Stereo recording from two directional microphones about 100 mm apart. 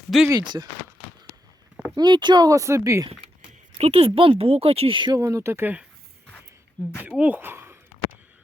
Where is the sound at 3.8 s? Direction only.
85° right.